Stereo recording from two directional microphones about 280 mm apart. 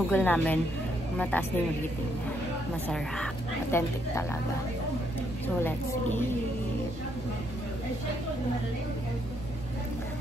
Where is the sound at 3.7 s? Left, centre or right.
Centre.